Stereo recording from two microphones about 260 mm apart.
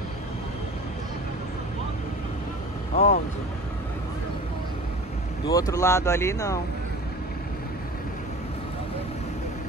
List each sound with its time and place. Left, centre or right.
2.9 s speech: left
5.5 s speech: centre